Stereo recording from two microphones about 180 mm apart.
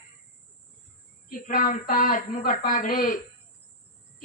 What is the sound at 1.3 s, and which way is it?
Speech, 50° left (ahead or behind).